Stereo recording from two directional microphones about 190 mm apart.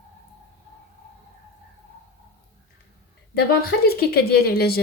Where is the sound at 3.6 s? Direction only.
55° left (ahead or behind).